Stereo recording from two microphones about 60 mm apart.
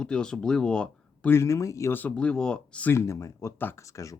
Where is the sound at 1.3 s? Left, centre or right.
Left.